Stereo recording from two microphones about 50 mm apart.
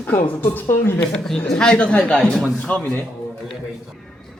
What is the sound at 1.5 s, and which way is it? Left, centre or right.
Speech, left.